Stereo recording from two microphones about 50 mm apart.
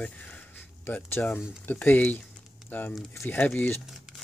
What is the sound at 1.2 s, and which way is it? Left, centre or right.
Speech, left.